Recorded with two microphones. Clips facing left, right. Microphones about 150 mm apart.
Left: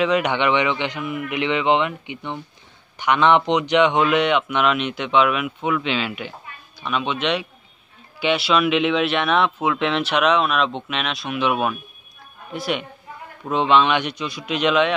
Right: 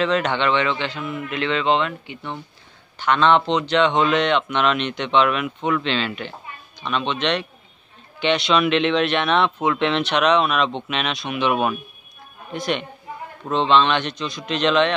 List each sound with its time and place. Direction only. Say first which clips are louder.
0.0 s a man's voice: left 1 dB; 10° left (ahead or behind)